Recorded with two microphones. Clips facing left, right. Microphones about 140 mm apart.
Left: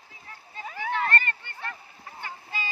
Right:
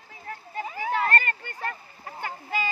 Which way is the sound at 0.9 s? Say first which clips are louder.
Right 2 dB; 40° right (ahead or behind).